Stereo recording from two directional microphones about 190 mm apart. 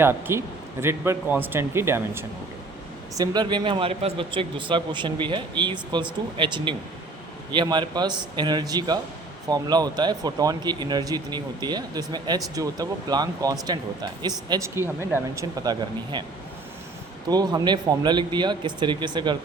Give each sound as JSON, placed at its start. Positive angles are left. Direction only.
{"t": 0.0, "sound": "speech", "side_deg": -10}
{"t": 17.2, "sound": "speech", "side_deg": -20}